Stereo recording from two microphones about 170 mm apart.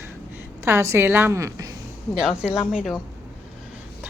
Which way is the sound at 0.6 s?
15° right (ahead or behind).